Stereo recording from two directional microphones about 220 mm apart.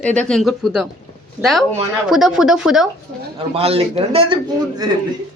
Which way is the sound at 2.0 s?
Centre (ahead or behind).